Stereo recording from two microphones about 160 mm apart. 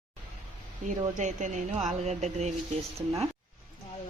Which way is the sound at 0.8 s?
50° right (ahead or behind).